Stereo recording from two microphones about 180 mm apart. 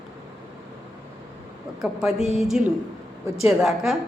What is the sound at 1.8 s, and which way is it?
Speech, centre (ahead or behind).